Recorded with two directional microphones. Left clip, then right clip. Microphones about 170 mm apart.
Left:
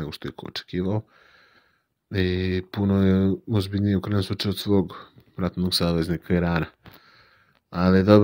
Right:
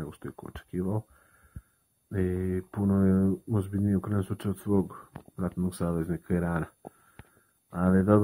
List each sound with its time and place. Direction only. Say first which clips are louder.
0.0 s speech: left 7 dB; 25° left (ahead or behind)
2.0 s speech: left 6 dB; 30° left (ahead or behind)
7.7 s speech: left 7 dB; 35° left (ahead or behind)